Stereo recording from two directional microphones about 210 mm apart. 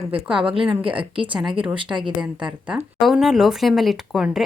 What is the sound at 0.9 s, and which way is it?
A woman's voice, 25° right (ahead or behind).